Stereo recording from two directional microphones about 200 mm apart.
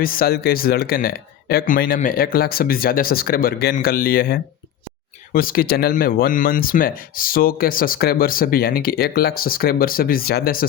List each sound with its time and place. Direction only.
0.0 s speech: 45° left (ahead or behind)